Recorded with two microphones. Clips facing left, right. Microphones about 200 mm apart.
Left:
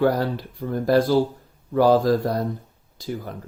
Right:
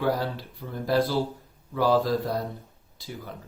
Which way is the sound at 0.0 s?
45° left (ahead or behind).